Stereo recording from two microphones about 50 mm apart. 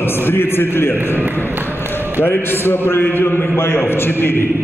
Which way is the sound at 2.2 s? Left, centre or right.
Left.